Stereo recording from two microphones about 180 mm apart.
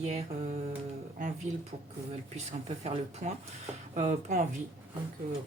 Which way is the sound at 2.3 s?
35° right (ahead or behind).